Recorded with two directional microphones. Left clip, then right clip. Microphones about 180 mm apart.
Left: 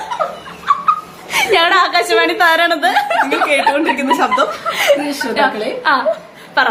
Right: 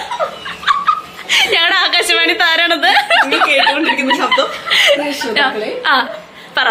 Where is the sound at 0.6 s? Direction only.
Centre (ahead or behind).